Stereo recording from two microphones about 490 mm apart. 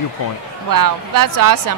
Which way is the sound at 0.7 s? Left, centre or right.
Right.